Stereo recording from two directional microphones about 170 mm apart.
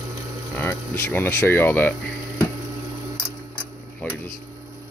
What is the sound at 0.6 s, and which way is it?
Speech, 10° left (ahead or behind).